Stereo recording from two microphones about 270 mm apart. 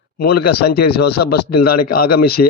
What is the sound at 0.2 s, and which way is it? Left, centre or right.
Speech, left.